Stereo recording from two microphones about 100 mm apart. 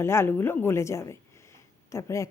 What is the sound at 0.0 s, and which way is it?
A woman's voice, 25° left (ahead or behind).